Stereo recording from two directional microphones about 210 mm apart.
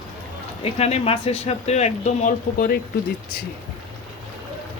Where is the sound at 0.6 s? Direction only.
30° left (ahead or behind).